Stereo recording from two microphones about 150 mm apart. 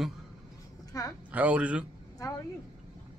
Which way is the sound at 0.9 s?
20° left (ahead or behind).